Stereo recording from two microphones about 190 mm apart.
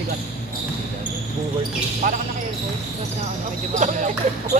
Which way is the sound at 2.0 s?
45° right (ahead or behind).